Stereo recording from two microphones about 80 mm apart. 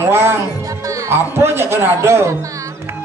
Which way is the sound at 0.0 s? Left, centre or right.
Right.